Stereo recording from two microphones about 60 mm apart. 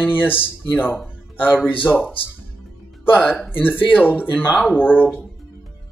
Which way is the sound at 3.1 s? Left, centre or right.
Left.